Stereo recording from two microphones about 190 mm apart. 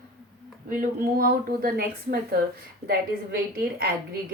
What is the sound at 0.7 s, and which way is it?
Speech, 45° right (ahead or behind).